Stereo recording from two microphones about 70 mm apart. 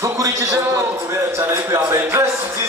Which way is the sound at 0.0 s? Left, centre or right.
Right.